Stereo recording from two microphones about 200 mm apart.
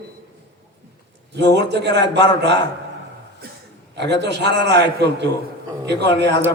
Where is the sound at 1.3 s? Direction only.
60° right (ahead or behind).